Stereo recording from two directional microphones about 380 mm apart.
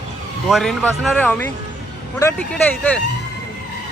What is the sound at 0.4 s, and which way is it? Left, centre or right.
Speech, centre.